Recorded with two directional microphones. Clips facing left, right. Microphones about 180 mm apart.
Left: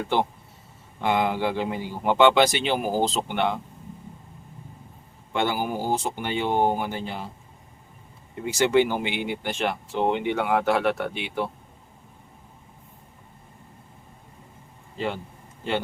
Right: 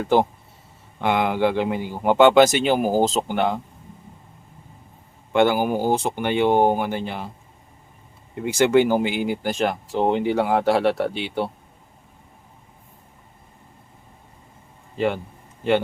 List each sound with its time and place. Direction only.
1.0 s speech: 65° right (ahead or behind); by 3.6 s 40° right (ahead or behind)
5.3 s speech: 55° right (ahead or behind)
8.4 s speech: 55° right (ahead or behind); by 11.5 s 30° right (ahead or behind)
14.9 s speech: 60° right (ahead or behind)